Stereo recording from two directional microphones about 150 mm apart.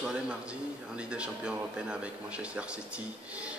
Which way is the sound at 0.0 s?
5° right (ahead or behind).